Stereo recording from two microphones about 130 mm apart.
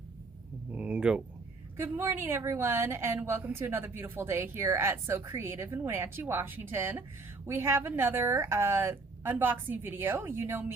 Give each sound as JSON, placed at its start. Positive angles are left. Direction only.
{"t": 0.7, "sound": "a woman's voice", "side_deg": -10}